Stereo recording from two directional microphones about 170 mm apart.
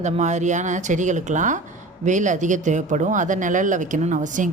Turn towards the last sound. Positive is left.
turn(degrees=-50)  # may be behind; listen again after turning